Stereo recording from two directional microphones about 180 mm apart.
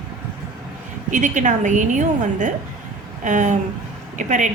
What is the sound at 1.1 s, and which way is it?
A woman's voice, 45° right (ahead or behind).